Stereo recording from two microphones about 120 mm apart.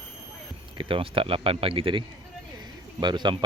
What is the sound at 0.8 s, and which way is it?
Speech, 45° right (ahead or behind).